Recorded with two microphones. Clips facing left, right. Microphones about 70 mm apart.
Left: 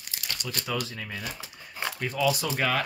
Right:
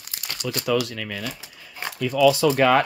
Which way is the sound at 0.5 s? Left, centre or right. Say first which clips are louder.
Right 10 dB; right.